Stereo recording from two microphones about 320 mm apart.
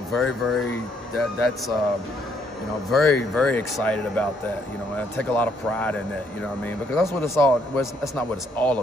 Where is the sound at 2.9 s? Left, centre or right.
Centre.